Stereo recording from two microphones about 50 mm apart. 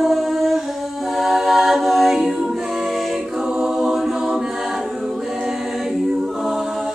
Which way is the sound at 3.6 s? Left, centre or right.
Centre.